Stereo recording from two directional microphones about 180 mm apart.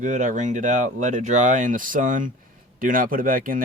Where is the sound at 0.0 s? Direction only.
45° right (ahead or behind).